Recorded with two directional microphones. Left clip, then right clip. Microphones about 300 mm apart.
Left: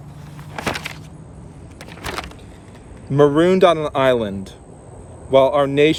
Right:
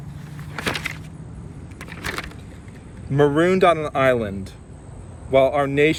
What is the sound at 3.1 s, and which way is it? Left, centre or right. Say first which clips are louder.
Speech: left 3 dB; centre.